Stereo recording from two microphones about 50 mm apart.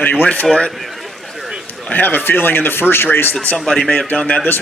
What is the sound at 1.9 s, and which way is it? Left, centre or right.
Speech, left.